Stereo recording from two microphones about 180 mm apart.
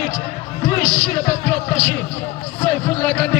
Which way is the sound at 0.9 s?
10° left (ahead or behind).